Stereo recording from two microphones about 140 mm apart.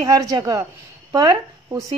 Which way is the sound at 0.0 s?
25° right (ahead or behind).